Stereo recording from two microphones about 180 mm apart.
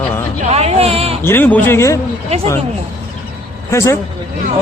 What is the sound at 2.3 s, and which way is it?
Speech, 35° right (ahead or behind).